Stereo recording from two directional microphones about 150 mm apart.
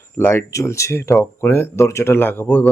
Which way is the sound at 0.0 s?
15° left (ahead or behind).